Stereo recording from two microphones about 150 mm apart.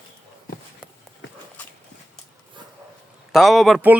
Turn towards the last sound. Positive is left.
turn(degrees=0)  # may be behind; listen again after turning